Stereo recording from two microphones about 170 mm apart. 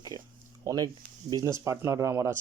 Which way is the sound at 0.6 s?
20° right (ahead or behind).